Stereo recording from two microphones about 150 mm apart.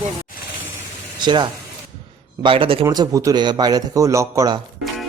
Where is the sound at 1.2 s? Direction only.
30° right (ahead or behind).